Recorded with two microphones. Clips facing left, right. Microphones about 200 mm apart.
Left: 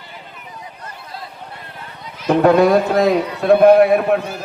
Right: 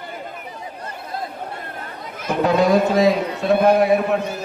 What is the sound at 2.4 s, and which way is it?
A man's voice, 55° left (ahead or behind).